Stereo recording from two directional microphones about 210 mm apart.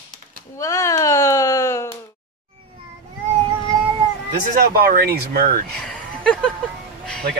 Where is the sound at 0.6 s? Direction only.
15° left (ahead or behind).